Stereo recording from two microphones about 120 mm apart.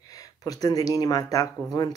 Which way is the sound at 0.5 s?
30° left (ahead or behind).